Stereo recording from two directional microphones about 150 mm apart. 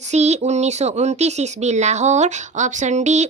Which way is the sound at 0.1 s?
50° right (ahead or behind).